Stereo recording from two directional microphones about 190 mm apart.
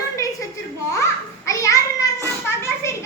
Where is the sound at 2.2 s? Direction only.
15° left (ahead or behind).